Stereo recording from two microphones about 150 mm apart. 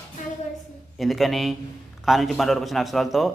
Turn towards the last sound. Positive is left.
turn(degrees=0)  # may be behind; listen again after turning